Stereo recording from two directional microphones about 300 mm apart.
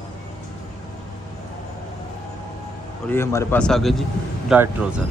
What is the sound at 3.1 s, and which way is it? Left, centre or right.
Speech, centre.